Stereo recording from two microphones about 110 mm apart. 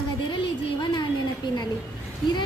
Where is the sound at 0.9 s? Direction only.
40° left (ahead or behind).